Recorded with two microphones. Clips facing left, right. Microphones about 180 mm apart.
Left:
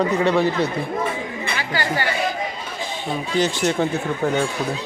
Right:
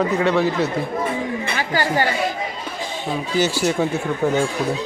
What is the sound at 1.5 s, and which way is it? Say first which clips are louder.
Chatter: right 3 dB; 40° right (ahead or behind).